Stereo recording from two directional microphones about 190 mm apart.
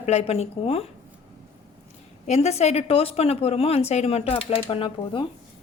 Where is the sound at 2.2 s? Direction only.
35° left (ahead or behind).